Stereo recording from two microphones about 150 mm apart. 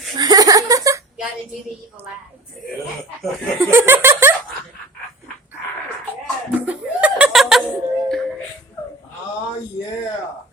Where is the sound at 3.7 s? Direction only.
15° right (ahead or behind).